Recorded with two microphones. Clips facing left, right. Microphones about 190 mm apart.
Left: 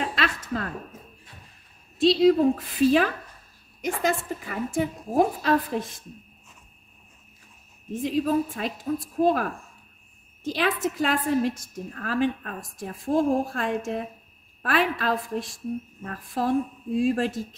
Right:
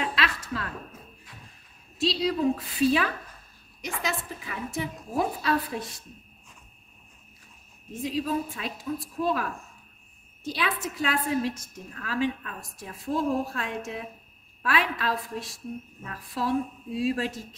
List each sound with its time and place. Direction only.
0.0 s a sound: 45° left (ahead or behind)
2.0 s a woman's voice: 50° left (ahead or behind)
8.0 s a woman's voice: 50° left (ahead or behind)